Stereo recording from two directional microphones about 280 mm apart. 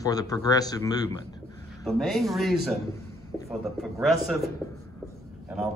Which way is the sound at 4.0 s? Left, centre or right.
Centre.